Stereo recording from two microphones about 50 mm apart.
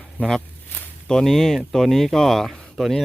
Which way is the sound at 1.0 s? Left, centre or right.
Centre.